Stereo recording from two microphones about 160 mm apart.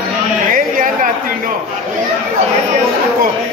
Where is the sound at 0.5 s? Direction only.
60° right (ahead or behind).